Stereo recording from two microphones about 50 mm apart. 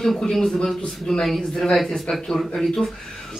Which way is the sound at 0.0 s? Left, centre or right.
Centre.